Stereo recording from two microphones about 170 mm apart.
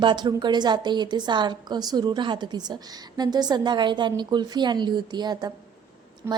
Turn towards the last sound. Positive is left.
turn(degrees=-15)  # may be behind; listen again after turning